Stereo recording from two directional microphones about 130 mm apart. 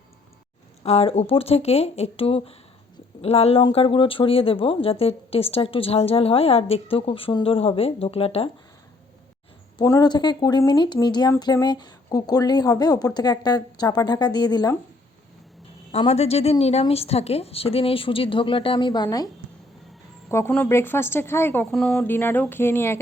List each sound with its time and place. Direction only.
0.9 s speech: 55° left (ahead or behind)
9.8 s speech: 25° left (ahead or behind)
15.9 s speech: 55° left (ahead or behind); by 19.3 s 30° left (ahead or behind)
20.5 s a woman's voice: 15° left (ahead or behind)
21.7 s speech: 5° left (ahead or behind)
22.0 s a woman's voice: 15° left (ahead or behind)